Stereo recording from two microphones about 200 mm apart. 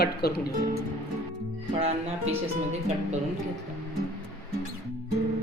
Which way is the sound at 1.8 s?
30° right (ahead or behind).